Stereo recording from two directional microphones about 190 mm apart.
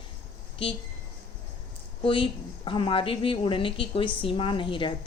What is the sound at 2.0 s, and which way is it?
A woman's voice, 25° left (ahead or behind).